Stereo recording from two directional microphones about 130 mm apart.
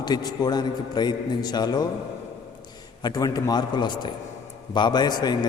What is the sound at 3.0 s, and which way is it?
A man's voice, 30° left (ahead or behind).